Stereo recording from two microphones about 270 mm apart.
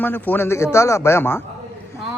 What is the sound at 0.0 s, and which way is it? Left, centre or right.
Speech, centre.